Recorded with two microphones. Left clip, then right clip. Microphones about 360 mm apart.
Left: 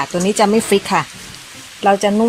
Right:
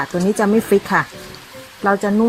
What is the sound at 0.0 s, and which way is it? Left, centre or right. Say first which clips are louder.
Speech: left 3 dB; centre.